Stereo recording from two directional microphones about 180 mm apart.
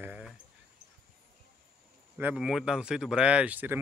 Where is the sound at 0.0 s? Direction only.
10° right (ahead or behind).